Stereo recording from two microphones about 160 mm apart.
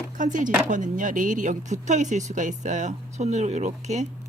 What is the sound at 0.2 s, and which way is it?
Speech, 55° right (ahead or behind).